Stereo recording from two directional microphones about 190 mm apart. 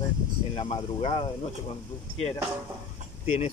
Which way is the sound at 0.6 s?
30° left (ahead or behind).